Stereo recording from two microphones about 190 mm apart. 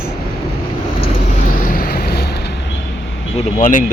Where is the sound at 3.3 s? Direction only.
40° left (ahead or behind).